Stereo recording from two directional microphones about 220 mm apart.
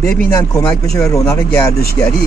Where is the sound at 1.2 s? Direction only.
15° left (ahead or behind).